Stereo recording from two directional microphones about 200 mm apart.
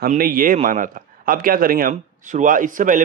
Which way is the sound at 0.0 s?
45° right (ahead or behind).